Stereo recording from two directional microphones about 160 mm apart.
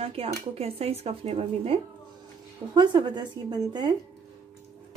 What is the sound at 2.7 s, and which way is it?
A woman's voice, 25° right (ahead or behind).